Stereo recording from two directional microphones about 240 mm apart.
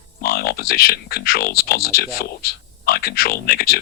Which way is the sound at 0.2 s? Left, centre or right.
Left.